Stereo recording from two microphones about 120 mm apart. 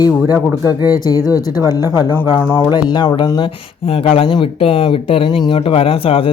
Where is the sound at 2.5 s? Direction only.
40° left (ahead or behind).